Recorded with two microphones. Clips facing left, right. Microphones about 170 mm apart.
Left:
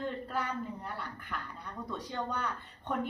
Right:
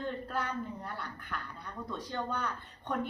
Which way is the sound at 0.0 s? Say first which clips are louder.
Even; 5° left (ahead or behind).